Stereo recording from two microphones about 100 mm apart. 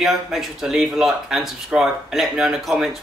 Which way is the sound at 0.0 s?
Centre (ahead or behind).